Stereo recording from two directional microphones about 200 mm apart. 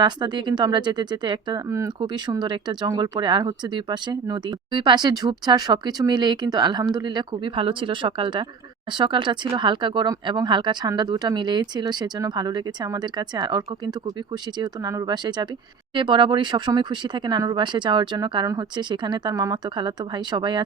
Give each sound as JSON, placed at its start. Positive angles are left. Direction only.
{"t": 0.0, "sound": "speech", "side_deg": -20}